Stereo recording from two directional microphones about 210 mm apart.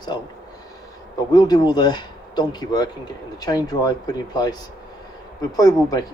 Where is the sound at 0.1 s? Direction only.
20° left (ahead or behind).